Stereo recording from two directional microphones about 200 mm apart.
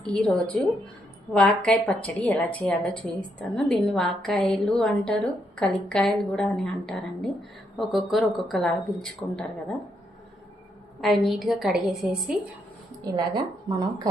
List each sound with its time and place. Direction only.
0.0 s a woman's voice: 5° left (ahead or behind)
11.0 s a woman's voice: centre (ahead or behind)
13.1 s a woman's voice: 20° right (ahead or behind)